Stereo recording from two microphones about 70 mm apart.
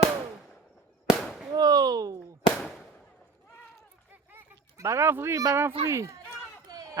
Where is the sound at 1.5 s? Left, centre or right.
Right.